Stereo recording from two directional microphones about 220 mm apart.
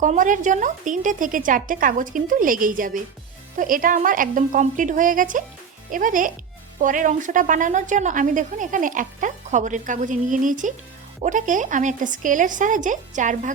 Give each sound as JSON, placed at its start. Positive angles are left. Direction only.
{"t": 0.0, "sound": "speech", "side_deg": -35}